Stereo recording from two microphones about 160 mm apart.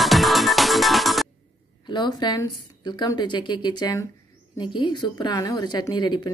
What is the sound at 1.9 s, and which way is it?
A woman's voice, 25° left (ahead or behind).